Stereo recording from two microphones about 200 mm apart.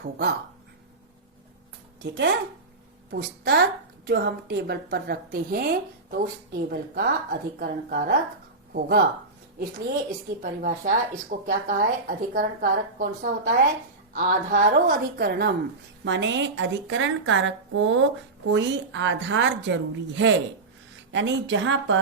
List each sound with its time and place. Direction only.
0.0 s a woman's voice: 55° right (ahead or behind)
2.0 s a woman's voice: 60° right (ahead or behind)
10.4 s a woman's voice: 45° right (ahead or behind)
16.0 s a woman's voice: 65° right (ahead or behind)